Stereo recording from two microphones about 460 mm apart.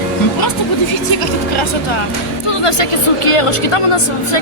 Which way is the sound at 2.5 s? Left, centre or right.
Left.